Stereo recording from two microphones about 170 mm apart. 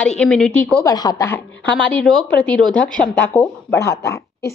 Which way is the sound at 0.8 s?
25° left (ahead or behind).